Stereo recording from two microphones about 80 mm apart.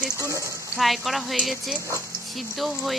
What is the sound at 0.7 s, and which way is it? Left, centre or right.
Speech, centre.